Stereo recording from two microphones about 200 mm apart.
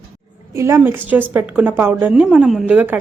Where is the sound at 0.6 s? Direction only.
15° right (ahead or behind).